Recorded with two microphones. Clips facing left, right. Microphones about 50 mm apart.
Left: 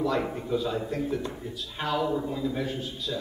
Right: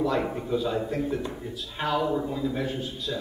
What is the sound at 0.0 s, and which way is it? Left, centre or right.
A man's voice, centre.